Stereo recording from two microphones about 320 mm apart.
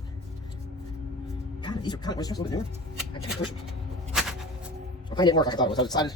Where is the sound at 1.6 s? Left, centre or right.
Centre.